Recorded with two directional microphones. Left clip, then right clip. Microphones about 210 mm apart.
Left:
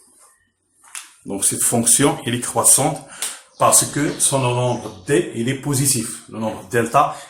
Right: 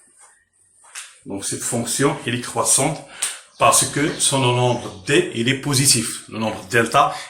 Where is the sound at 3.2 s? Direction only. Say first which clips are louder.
Right 2 dB; centre (ahead or behind).